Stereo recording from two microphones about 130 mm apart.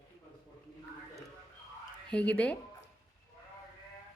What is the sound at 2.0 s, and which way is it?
Speech, 10° left (ahead or behind).